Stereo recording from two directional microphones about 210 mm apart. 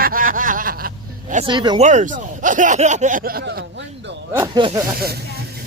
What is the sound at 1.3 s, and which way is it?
Speech, 25° right (ahead or behind).